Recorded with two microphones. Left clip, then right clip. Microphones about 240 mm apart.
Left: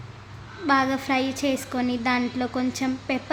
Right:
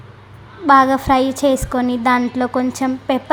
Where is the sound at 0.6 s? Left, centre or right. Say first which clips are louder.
Right 11 dB; right.